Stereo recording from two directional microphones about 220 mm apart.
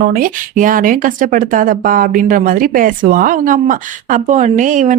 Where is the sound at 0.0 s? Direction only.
40° right (ahead or behind).